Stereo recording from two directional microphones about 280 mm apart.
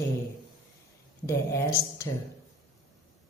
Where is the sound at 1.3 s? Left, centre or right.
Centre.